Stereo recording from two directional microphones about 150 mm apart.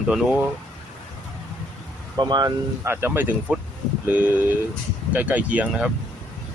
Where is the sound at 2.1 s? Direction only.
30° right (ahead or behind).